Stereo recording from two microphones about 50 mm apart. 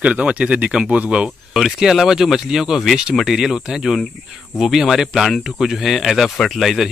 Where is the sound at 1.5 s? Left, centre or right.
Centre.